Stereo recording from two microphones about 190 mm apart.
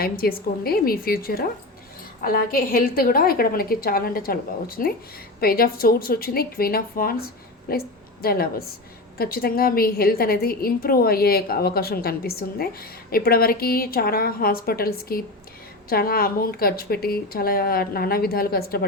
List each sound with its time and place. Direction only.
0.0 s a woman's voice: 50° left (ahead or behind)